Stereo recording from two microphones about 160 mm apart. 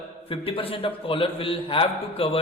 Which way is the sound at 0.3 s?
35° left (ahead or behind).